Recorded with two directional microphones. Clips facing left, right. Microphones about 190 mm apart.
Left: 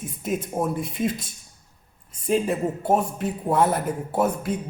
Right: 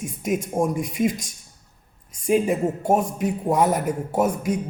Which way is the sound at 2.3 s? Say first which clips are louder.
Right 3 dB; 10° right (ahead or behind).